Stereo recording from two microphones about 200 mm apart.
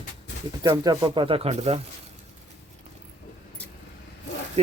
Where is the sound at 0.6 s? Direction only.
15° right (ahead or behind).